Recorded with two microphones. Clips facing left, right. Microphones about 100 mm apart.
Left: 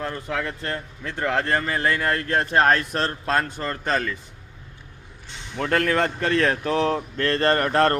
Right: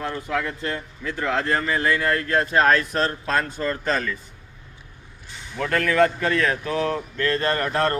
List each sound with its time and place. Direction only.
0.6 s speech: 40° left (ahead or behind)
5.5 s speech: 35° left (ahead or behind)